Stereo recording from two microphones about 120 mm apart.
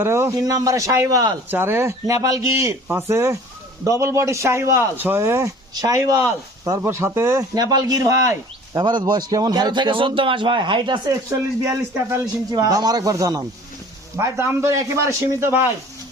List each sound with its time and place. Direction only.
0.0 s a man's voice: 20° right (ahead or behind); by 11.1 s 40° right (ahead or behind)
11.6 s a man's voice: 25° right (ahead or behind)